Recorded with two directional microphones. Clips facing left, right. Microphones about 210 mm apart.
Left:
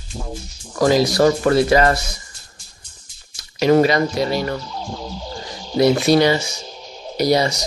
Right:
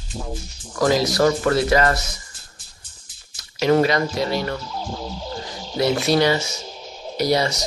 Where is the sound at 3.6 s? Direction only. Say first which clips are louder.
Left 3 dB; 15° left (ahead or behind).